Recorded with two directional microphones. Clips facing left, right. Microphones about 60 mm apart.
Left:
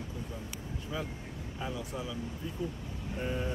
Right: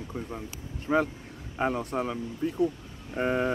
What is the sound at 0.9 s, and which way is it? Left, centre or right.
Speech, right.